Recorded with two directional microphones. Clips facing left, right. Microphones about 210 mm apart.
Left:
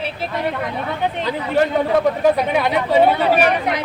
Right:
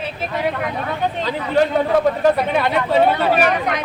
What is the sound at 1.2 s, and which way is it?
Speech, 10° left (ahead or behind).